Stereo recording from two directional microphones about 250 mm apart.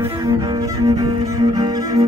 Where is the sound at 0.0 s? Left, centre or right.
Centre.